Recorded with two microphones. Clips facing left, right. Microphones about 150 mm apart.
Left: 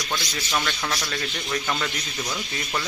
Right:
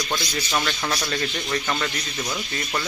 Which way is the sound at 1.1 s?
Centre (ahead or behind).